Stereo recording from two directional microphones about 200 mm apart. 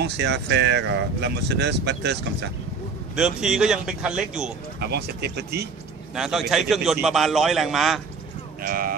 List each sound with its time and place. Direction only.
0.0 s speech: 55° right (ahead or behind)
3.2 s a man's voice: 5° right (ahead or behind)
4.7 s speech: 55° right (ahead or behind)
6.1 s a man's voice: centre (ahead or behind)
8.6 s speech: 45° right (ahead or behind)